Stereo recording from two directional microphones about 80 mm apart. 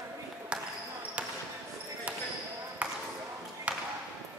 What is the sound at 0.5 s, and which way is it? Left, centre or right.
Basketball bounce, centre.